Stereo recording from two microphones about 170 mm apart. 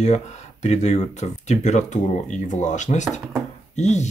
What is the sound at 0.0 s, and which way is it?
Speech, 40° left (ahead or behind).